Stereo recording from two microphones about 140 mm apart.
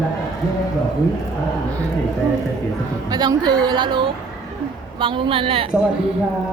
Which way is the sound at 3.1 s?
30° right (ahead or behind).